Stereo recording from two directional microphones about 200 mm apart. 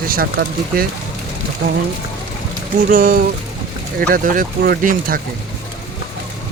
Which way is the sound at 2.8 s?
45° right (ahead or behind).